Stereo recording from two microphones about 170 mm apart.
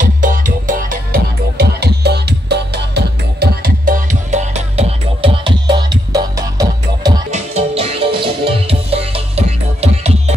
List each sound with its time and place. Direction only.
0.0 s music: 50° right (ahead or behind); by 7.2 s 20° right (ahead or behind)
7.2 s music: 40° right (ahead or behind)